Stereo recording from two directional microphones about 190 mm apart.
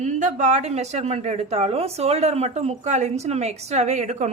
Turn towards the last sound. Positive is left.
turn(degrees=-40)  # may be behind; listen again after turning